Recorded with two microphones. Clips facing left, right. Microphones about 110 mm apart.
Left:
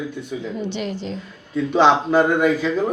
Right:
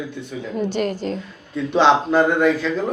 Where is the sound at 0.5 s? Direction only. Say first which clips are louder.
Right 7 dB; 45° right (ahead or behind).